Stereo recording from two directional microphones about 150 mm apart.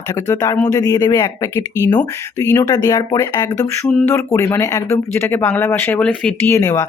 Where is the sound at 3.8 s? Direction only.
10° left (ahead or behind).